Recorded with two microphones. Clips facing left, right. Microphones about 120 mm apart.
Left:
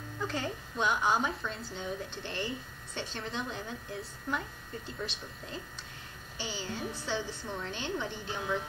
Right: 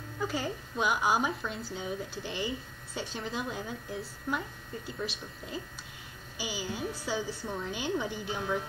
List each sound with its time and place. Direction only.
0.2 s a woman's voice: 5° right (ahead or behind)